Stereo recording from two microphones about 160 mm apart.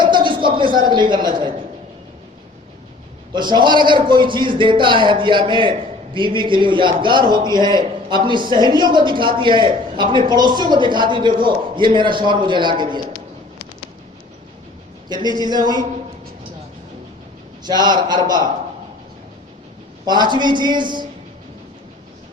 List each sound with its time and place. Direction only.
0.0 s a sound: 30° right (ahead or behind)
3.3 s a man's voice: 30° right (ahead or behind)
15.1 s a man's voice: 25° right (ahead or behind)
17.6 s a man's voice: 25° right (ahead or behind)
20.1 s a man's voice: 25° right (ahead or behind)